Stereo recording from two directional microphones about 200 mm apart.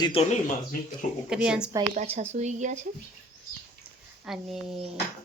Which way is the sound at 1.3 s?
5° right (ahead or behind).